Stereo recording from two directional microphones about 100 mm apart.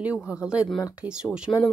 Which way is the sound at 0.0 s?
10° right (ahead or behind).